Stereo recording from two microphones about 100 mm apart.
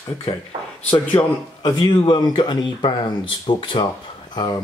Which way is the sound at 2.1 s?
50° left (ahead or behind).